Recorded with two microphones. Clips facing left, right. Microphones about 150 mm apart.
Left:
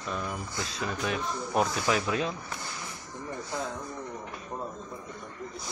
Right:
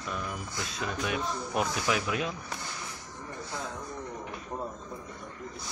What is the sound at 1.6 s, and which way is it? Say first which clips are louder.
Speech: left 3 dB; 35° left (ahead or behind).